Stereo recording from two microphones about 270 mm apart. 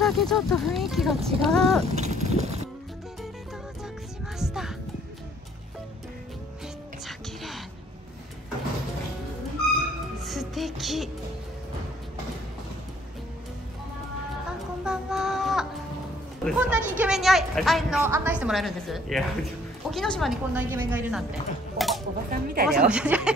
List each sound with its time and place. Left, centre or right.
0.0 s a woman's voice: centre
1.9 s a sound: right
4.4 s music: centre
7.1 s music: centre
10.2 s music: centre
14.9 s child singing: centre
16.4 s a woman's voice: centre
21.7 s a sound: centre
22.3 s speech: right
22.7 s a woman's voice: centre